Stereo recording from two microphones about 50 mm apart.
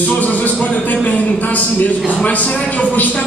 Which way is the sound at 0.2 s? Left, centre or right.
Left.